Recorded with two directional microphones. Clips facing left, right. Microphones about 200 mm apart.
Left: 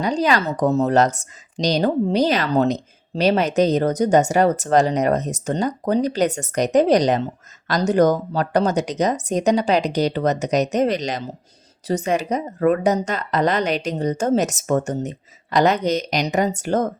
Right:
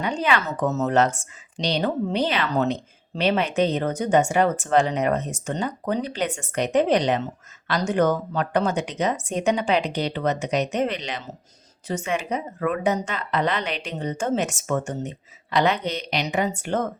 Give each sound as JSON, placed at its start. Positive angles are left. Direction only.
{"t": 0.0, "sound": "speech", "side_deg": 35}